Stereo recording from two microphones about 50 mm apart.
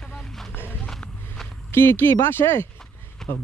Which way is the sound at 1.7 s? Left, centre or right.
Left.